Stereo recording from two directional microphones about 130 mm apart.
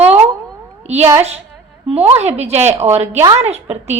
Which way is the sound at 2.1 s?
55° right (ahead or behind).